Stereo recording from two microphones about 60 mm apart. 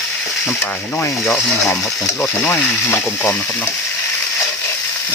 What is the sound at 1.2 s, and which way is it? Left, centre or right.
Speech, centre.